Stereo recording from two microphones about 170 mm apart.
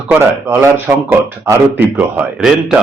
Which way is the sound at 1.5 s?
15° right (ahead or behind).